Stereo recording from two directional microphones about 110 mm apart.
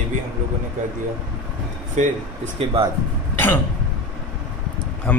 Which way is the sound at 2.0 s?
90° right.